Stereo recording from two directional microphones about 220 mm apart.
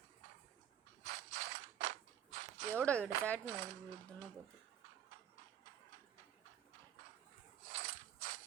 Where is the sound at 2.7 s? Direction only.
5° left (ahead or behind).